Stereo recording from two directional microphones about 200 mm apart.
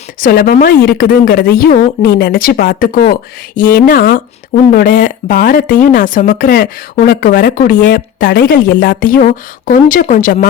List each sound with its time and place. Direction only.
0.2 s a woman's voice: 45° left (ahead or behind)